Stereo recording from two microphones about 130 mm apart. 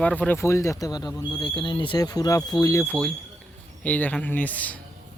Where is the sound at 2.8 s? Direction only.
15° left (ahead or behind).